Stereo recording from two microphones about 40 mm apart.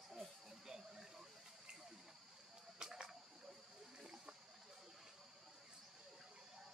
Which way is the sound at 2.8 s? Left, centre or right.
Centre.